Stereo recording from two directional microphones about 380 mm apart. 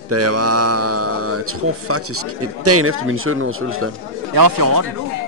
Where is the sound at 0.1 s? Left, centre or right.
Right.